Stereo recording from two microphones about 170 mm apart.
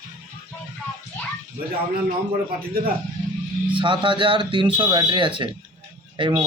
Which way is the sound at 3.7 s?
30° right (ahead or behind).